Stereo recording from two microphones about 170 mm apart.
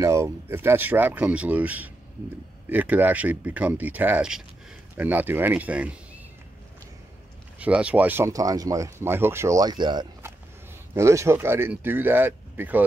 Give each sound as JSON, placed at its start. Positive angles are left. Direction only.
{"t": 0.0, "sound": "speech", "side_deg": -15}
{"t": 7.5, "sound": "speech", "side_deg": -10}